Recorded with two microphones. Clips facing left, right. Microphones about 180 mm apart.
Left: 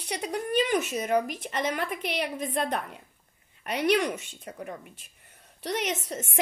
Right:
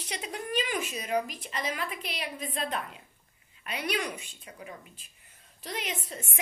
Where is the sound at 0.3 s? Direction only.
45° left (ahead or behind).